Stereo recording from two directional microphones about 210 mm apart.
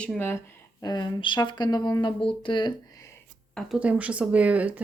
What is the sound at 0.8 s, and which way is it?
Speech, 20° left (ahead or behind).